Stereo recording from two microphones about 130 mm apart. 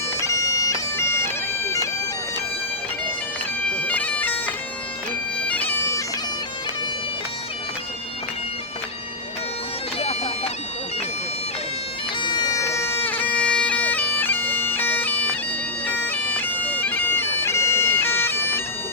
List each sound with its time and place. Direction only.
0.2 s bagpipes: 25° left (ahead or behind)
3.7 s bagpipes: 10° left (ahead or behind)
10.0 s bagpipes: 50° left (ahead or behind)
12.2 s bagpipes: 35° left (ahead or behind); by 18.6 s 15° left (ahead or behind)